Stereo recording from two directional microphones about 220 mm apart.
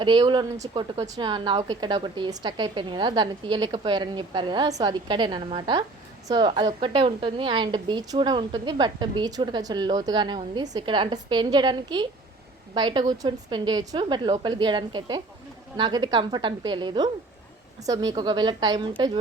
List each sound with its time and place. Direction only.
0.0 s a woman's voice: 20° right (ahead or behind)